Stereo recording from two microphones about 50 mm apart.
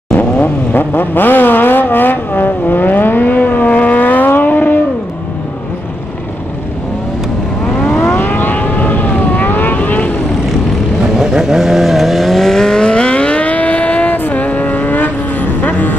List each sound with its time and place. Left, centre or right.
0.1 s vehicle: left
0.7 s vehicle: left
7.6 s vehicle: centre
8.3 s vehicle: left
11.1 s vehicle: centre; by 15.9 s left